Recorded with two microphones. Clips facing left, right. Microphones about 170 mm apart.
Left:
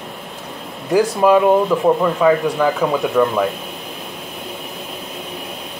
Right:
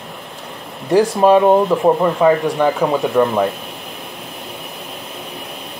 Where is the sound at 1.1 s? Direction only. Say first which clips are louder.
Right 1 dB; 30° right (ahead or behind).